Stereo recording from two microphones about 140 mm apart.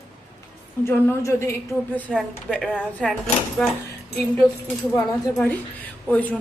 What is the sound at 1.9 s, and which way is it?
A woman's voice, 10° left (ahead or behind).